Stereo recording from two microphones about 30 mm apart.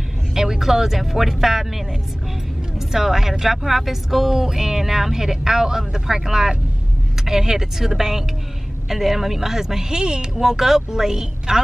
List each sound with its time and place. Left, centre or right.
0.3 s speech: centre
2.9 s speech: centre